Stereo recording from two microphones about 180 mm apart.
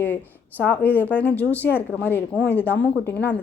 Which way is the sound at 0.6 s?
10° left (ahead or behind).